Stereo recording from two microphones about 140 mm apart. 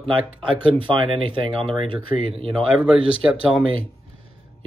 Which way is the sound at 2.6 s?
5° right (ahead or behind).